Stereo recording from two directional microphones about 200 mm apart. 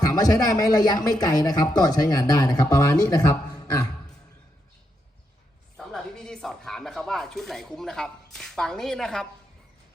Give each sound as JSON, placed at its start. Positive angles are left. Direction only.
{"t": 0.0, "sound": "speech", "side_deg": 15}
{"t": 5.7, "sound": "speech", "side_deg": 0}